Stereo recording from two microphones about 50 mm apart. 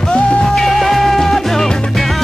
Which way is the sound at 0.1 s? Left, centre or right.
Centre.